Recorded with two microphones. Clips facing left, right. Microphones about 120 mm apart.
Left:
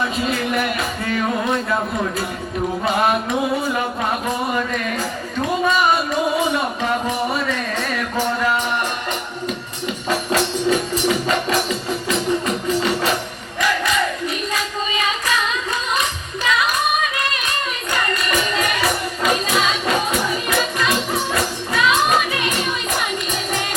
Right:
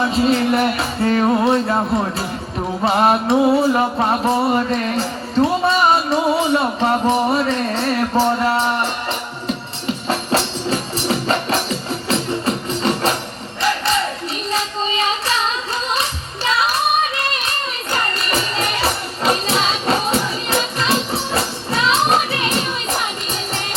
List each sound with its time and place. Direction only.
0.0 s music: 30° right (ahead or behind)
2.8 s music: 35° right (ahead or behind)
4.5 s music: 35° right (ahead or behind)
10.3 s music: 35° right (ahead or behind)
13.6 s a sound: 35° right (ahead or behind)
16.0 s music: 35° right (ahead or behind)